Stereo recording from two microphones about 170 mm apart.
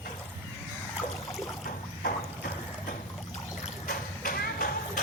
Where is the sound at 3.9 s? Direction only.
60° left (ahead or behind).